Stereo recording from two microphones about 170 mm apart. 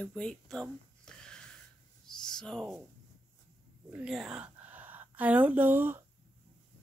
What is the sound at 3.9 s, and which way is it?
A woman's voice, 5° right (ahead or behind).